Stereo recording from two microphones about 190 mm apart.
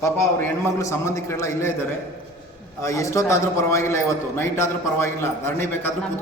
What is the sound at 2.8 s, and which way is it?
A man's voice, 15° left (ahead or behind).